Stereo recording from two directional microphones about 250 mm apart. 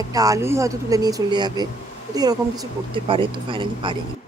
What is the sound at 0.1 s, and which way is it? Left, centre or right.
A woman's voice, centre.